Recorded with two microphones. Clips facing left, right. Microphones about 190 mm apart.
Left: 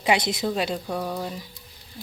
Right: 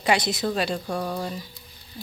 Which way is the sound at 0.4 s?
10° left (ahead or behind).